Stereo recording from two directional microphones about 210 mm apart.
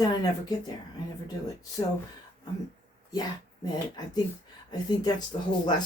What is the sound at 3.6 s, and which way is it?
Speech, 20° left (ahead or behind).